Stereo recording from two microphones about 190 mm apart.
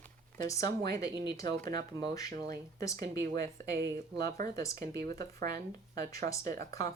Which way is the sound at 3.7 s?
55° right (ahead or behind).